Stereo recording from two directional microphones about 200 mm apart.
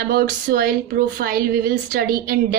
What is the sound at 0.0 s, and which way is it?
Speech, 50° right (ahead or behind).